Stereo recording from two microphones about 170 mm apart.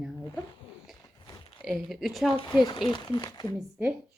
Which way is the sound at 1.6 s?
Centre (ahead or behind).